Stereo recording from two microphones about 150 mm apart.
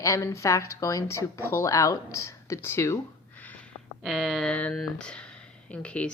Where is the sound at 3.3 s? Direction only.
10° left (ahead or behind).